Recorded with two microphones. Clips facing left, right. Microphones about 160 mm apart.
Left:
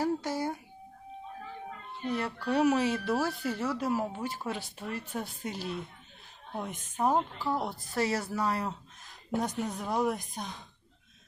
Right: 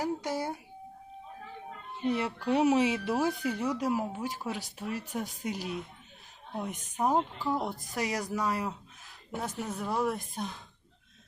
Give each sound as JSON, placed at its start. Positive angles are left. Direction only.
{"t": 0.0, "sound": "a child's voice", "side_deg": -20}
{"t": 2.0, "sound": "speech", "side_deg": -25}
{"t": 7.4, "sound": "a woman's voice", "side_deg": 0}
{"t": 7.9, "sound": "speech", "side_deg": -15}
{"t": 9.7, "sound": "a woman's voice", "side_deg": 0}